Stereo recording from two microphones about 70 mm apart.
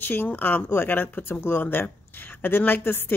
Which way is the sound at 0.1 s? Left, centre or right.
Left.